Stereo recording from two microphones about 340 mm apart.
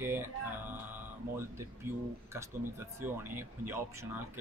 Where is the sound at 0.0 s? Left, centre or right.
Centre.